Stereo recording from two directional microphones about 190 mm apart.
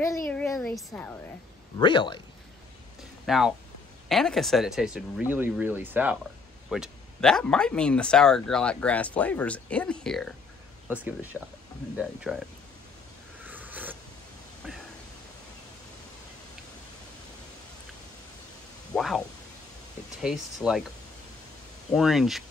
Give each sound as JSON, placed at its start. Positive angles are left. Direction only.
{"t": 0.3, "sound": "a sound", "side_deg": 5}
{"t": 0.7, "sound": "speech", "side_deg": 5}
{"t": 1.8, "sound": "speech", "side_deg": 25}
{"t": 3.3, "sound": "speech", "side_deg": 0}
{"t": 10.9, "sound": "speech", "side_deg": -10}
{"t": 13.5, "sound": "a sound", "side_deg": -10}
{"t": 18.9, "sound": "speech", "side_deg": 0}
{"t": 21.9, "sound": "speech", "side_deg": 0}